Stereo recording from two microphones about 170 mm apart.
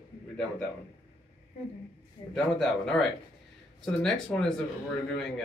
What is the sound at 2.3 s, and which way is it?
A man's voice, 5° left (ahead or behind).